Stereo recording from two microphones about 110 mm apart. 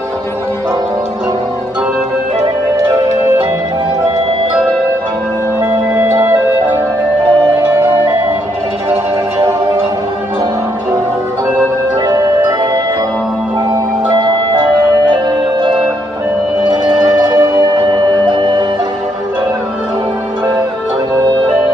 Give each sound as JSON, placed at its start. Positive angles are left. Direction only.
{"t": 14.0, "sound": "music", "side_deg": -45}
{"t": 16.7, "sound": "music", "side_deg": -35}